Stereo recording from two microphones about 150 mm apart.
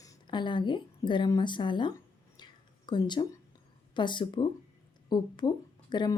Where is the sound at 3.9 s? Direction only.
30° left (ahead or behind).